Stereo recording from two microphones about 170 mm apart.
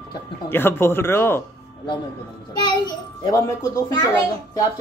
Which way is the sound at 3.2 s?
20° left (ahead or behind).